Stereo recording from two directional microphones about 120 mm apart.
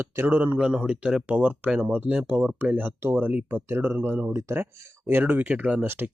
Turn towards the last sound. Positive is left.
turn(degrees=-15)  # may be behind; listen again after turning